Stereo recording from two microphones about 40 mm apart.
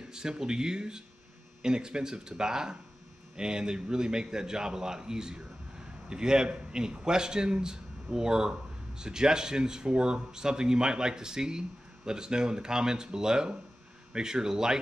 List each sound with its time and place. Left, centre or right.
0.1 s a man's voice: centre